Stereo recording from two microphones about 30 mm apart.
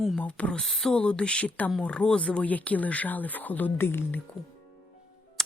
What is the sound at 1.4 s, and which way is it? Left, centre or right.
Speech, left.